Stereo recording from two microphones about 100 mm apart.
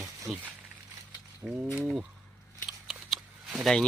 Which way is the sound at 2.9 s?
5° right (ahead or behind).